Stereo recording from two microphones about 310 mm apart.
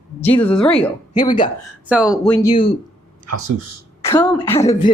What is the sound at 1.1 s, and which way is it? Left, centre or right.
Speech, centre.